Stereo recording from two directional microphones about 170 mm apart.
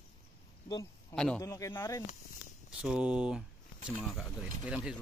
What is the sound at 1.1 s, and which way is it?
Speech, 5° left (ahead or behind).